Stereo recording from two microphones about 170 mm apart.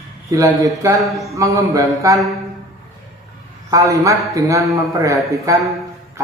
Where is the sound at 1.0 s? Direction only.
Centre (ahead or behind).